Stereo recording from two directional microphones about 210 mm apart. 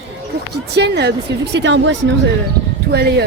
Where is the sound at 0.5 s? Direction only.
50° right (ahead or behind).